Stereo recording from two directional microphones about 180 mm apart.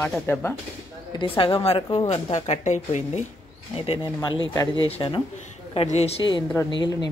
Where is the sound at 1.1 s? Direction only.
30° left (ahead or behind).